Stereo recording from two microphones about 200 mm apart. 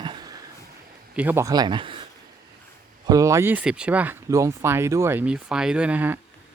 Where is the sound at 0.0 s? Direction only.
20° right (ahead or behind).